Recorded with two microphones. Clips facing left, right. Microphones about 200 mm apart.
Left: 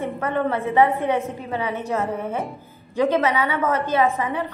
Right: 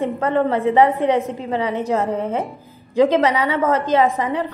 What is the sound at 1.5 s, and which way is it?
A woman's voice, 35° right (ahead or behind).